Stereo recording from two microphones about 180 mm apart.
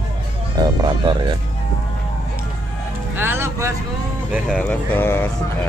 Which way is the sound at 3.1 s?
10° right (ahead or behind).